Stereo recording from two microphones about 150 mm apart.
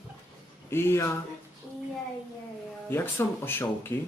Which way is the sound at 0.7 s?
15° left (ahead or behind).